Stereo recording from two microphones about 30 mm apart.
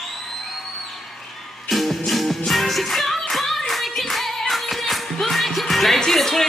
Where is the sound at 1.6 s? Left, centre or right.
Centre.